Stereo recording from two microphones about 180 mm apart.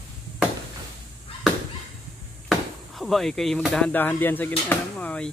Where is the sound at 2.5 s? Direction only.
Centre (ahead or behind).